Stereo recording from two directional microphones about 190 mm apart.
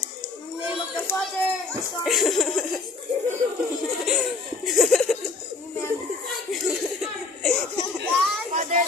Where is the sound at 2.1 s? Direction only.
Centre (ahead or behind).